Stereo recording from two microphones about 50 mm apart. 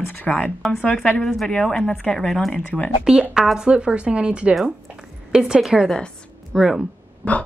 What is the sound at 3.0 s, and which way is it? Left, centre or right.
Speech, centre.